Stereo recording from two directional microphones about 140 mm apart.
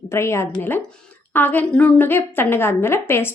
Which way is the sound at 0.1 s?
20° left (ahead or behind).